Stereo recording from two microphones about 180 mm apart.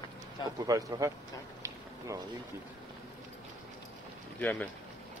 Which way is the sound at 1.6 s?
20° right (ahead or behind).